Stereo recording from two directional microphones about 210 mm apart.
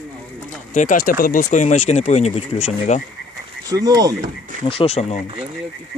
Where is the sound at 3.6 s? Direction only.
15° right (ahead or behind).